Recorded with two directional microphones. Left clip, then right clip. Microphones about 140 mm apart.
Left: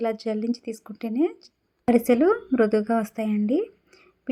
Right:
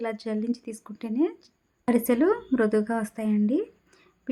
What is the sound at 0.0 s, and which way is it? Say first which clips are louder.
Speech: left 4 dB; 15° left (ahead or behind).